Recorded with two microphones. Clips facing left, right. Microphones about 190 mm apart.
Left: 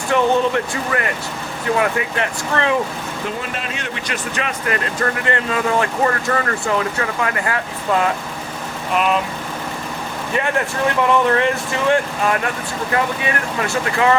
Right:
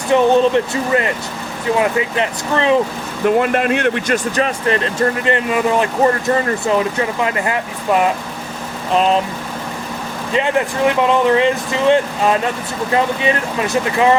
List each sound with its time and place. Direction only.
0.1 s speech: 20° right (ahead or behind)
3.3 s speech: 60° right (ahead or behind); by 8.1 s 20° right (ahead or behind)
8.9 s speech: 30° right (ahead or behind)
10.3 s speech: 20° right (ahead or behind)